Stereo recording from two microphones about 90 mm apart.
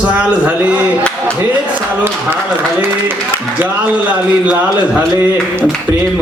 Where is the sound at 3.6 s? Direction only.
15° right (ahead or behind).